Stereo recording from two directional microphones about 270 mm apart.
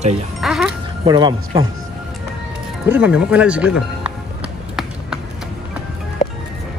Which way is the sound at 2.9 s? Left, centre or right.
Centre.